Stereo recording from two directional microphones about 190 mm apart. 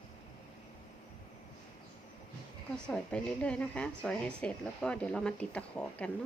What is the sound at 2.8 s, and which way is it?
Speech, 5° left (ahead or behind).